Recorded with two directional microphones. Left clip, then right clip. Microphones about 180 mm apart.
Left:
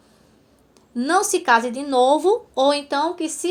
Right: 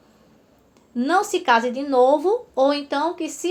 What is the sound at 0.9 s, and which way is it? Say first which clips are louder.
Speech: left 1 dB; 40° left (ahead or behind).